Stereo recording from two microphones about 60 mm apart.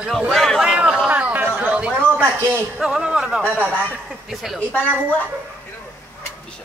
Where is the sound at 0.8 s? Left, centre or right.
Centre.